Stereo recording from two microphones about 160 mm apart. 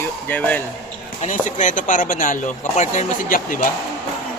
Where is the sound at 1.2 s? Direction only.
50° left (ahead or behind).